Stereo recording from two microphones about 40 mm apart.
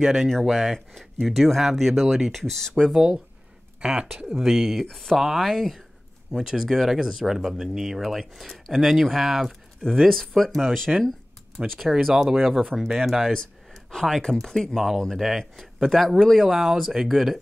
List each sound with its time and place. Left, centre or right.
0.0 s speech: centre
0.3 s speech: centre
2.9 s speech: centre
4.4 s speech: centre
4.8 s speech: centre
5.1 s speech: centre
10.0 s speech: centre
11.9 s speech: centre
13.3 s speech: centre
15.1 s speech: centre